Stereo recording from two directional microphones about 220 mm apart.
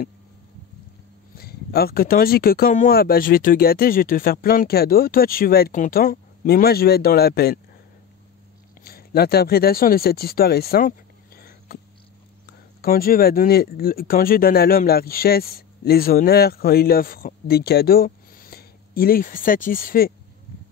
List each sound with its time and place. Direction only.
1.4 s speech: 45° left (ahead or behind)
8.8 s speech: 45° left (ahead or behind)
12.8 s speech: 40° left (ahead or behind)